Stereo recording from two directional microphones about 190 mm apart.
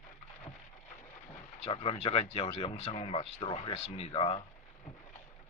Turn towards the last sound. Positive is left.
turn(degrees=30)  # may be behind; listen again after turning